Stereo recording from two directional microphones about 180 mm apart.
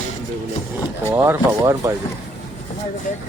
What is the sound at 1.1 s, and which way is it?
Speech, 15° right (ahead or behind).